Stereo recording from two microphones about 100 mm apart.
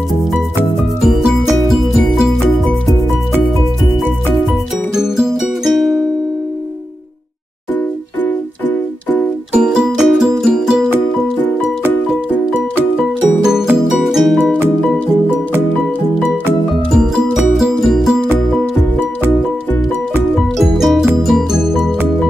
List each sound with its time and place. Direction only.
1.0 s music: 5° right (ahead or behind)
4.9 s music: 5° right (ahead or behind)
8.2 s keyboard: 15° left (ahead or behind)
9.5 s music: 5° right (ahead or behind)
12.5 s music: 15° right (ahead or behind)
14.0 s music: centre (ahead or behind)
16.9 s music: 5° right (ahead or behind)
20.3 s music: centre (ahead or behind)